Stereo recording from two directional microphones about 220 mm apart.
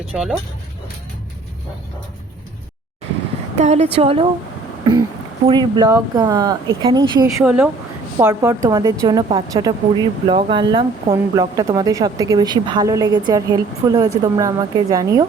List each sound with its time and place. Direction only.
0.1 s speech: centre (ahead or behind)
3.6 s a woman's voice: 30° right (ahead or behind)
7.4 s a woman's voice: 5° right (ahead or behind)